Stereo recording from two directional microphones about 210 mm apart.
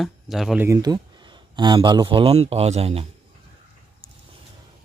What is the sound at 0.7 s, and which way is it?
A man's voice, 20° right (ahead or behind).